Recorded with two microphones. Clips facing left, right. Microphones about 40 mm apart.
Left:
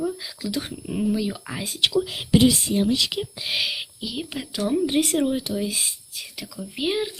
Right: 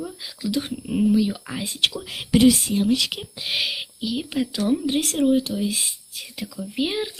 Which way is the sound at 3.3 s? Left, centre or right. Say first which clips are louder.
Even; centre.